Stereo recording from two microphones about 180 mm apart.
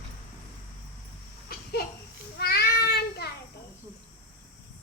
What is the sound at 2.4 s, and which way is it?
Child singing, 60° left (ahead or behind).